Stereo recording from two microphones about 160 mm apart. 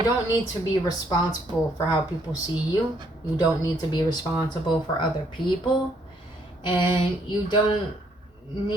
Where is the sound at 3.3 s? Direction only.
25° left (ahead or behind).